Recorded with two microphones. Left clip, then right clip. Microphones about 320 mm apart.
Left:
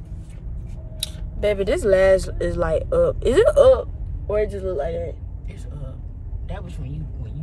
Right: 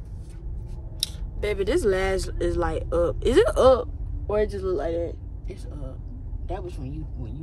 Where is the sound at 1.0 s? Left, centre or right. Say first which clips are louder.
Left 6 dB; centre.